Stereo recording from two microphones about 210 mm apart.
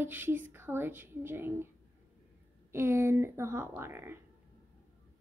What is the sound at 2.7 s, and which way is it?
A woman's voice, 10° right (ahead or behind).